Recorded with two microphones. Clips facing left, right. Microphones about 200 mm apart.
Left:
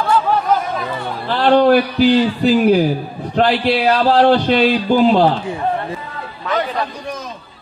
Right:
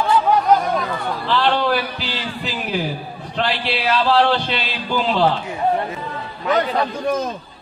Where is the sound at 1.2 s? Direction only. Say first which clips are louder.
Left 8 dB; 45° left (ahead or behind).